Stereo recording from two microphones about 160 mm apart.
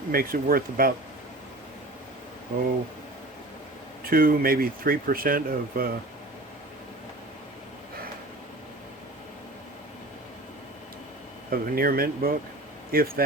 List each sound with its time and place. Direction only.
0.1 s speech: 65° right (ahead or behind)
4.0 s speech: 65° right (ahead or behind)
11.5 s speech: 65° right (ahead or behind)